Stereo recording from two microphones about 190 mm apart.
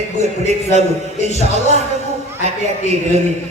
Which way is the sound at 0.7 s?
35° left (ahead or behind).